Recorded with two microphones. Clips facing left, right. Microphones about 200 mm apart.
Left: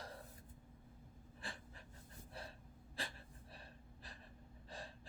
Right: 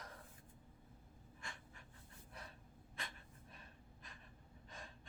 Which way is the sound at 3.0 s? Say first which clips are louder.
Left 4 dB; 30° left (ahead or behind).